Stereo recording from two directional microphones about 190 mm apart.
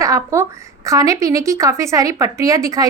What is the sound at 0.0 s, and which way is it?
A woman's voice, 15° right (ahead or behind).